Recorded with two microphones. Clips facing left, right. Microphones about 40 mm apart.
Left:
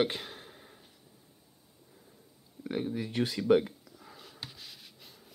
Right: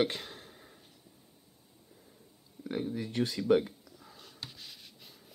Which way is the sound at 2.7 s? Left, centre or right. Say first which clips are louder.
Left 1 dB; centre.